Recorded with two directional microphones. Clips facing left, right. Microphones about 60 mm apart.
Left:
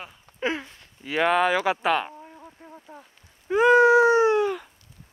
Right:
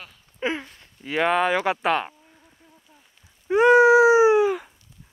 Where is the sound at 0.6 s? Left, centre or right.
Centre.